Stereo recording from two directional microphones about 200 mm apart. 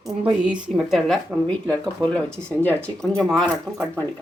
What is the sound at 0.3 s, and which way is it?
Speech, 5° right (ahead or behind).